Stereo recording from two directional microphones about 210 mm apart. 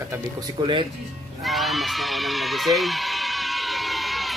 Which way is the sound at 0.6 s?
25° right (ahead or behind).